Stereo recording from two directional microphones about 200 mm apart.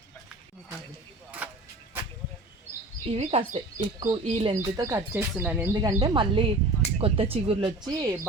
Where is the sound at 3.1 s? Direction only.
30° right (ahead or behind).